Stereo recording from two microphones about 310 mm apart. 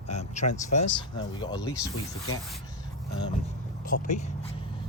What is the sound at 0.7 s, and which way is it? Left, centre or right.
Speech, left.